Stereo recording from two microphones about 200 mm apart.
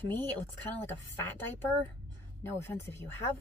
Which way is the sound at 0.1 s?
10° left (ahead or behind).